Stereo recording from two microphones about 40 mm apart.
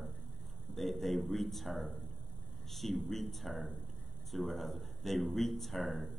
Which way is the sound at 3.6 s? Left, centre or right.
Left.